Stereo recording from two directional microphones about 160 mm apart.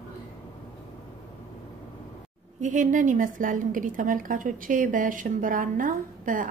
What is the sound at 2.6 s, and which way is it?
A woman's voice, 50° right (ahead or behind).